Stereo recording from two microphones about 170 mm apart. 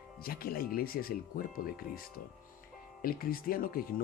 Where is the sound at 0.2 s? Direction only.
60° left (ahead or behind).